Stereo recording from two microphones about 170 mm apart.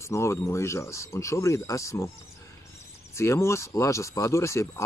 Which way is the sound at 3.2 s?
15° left (ahead or behind).